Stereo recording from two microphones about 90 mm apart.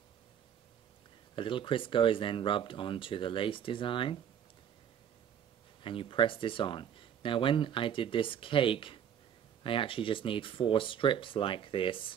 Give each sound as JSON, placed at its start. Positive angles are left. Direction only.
{"t": 1.3, "sound": "speech", "side_deg": 70}
{"t": 5.8, "sound": "speech", "side_deg": 75}